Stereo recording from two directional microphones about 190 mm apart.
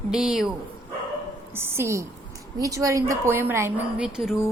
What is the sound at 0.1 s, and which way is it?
Speech, centre (ahead or behind).